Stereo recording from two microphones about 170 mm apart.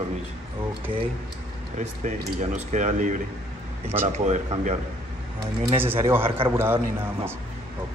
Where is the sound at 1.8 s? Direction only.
45° right (ahead or behind).